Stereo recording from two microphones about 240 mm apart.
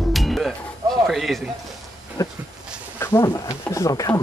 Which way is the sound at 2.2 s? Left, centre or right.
Centre.